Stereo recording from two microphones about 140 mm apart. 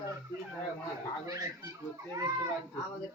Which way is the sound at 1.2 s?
25° right (ahead or behind).